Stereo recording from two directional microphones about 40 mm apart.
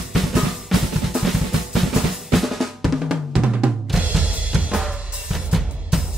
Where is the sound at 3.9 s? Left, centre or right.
Centre.